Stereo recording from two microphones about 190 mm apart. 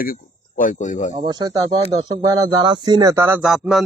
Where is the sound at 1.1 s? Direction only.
20° right (ahead or behind).